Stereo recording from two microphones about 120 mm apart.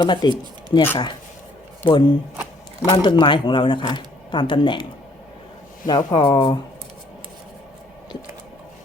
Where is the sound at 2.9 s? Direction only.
45° left (ahead or behind).